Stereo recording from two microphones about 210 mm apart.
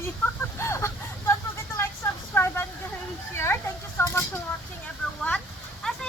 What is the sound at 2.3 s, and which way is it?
Vehicle, 10° left (ahead or behind).